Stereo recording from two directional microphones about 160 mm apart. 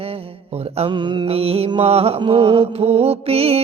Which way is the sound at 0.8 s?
40° right (ahead or behind).